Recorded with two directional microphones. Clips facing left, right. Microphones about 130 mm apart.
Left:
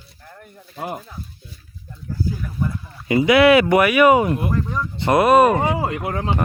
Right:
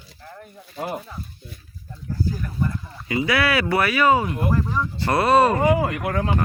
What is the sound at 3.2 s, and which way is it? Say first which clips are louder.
Speech: left 9 dB; 20° left (ahead or behind).